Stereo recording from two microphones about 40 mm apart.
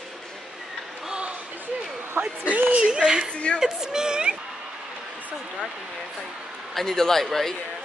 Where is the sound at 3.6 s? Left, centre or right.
Centre.